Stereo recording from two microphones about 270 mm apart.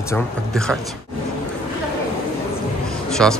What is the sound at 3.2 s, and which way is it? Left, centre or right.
Speech, centre.